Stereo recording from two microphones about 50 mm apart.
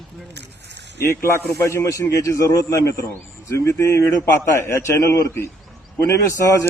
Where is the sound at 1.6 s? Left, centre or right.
Left.